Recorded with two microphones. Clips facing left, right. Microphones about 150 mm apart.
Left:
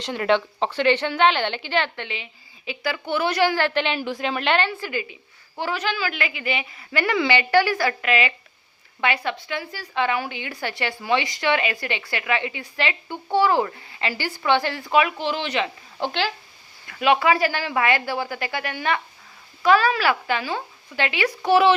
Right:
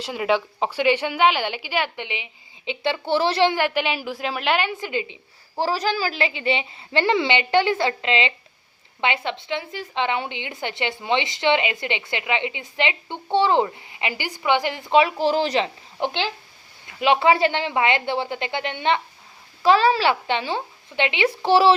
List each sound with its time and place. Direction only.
0.0 s a woman's voice: 5° right (ahead or behind); by 3.6 s 25° right (ahead or behind)
3.6 s a woman's voice: 10° right (ahead or behind)
4.7 s a woman's voice: 20° right (ahead or behind)
5.5 s a woman's voice: 35° right (ahead or behind)
16.0 s a woman's voice: 20° right (ahead or behind)